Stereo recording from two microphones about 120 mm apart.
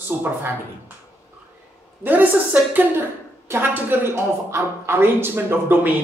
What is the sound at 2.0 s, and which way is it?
A woman's voice, 15° right (ahead or behind).